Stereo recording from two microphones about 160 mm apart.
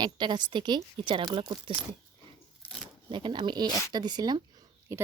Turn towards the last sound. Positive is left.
turn(degrees=-25)  # may be behind; listen again after turning